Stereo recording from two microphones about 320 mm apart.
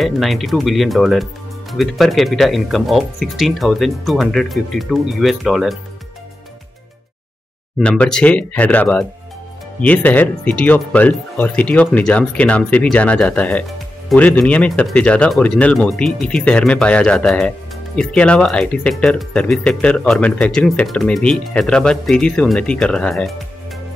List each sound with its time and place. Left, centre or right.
0.0 s speech: centre
7.8 s speech: centre